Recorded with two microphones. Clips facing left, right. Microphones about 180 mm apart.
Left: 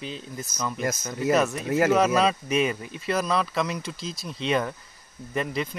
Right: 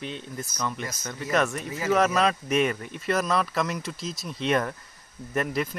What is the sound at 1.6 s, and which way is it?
Speech, 85° left.